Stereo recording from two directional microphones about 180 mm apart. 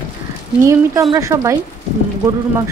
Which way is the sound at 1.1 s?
15° right (ahead or behind).